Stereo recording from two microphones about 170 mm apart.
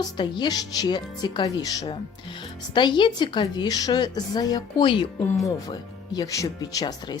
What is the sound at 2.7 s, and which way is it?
Speech, 25° left (ahead or behind).